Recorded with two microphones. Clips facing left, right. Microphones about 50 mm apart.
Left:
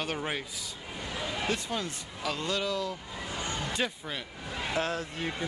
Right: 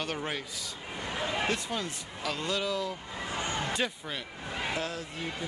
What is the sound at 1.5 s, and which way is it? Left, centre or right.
Speech, centre.